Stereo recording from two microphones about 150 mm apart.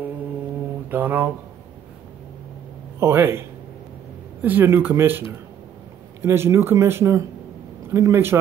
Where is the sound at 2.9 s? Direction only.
15° right (ahead or behind).